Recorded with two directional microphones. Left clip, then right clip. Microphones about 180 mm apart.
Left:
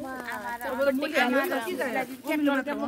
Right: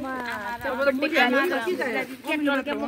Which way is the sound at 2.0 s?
35° left (ahead or behind).